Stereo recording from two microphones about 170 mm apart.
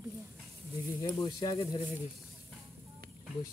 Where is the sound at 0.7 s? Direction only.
20° left (ahead or behind).